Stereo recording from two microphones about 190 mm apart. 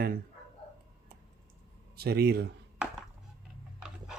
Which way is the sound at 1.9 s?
55° right (ahead or behind).